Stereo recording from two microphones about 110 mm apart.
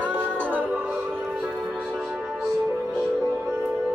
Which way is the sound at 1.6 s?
5° right (ahead or behind).